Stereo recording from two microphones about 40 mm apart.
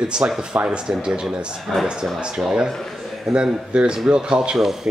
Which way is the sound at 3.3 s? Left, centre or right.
Right.